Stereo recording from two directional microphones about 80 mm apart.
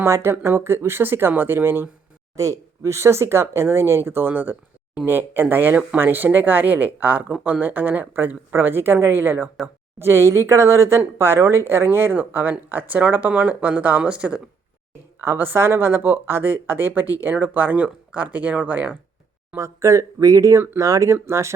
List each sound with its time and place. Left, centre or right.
0.0 s speech: right
2.3 s speech: right; by 14.4 s centre
15.2 s speech: right
19.5 s speech: right